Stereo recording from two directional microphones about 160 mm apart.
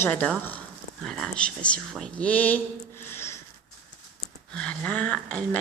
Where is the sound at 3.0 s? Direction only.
15° left (ahead or behind).